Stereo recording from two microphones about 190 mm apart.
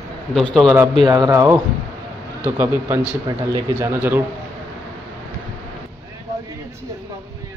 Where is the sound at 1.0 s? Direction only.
20° right (ahead or behind).